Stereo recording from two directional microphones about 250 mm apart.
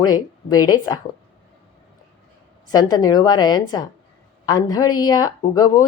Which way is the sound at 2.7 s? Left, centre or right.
Centre.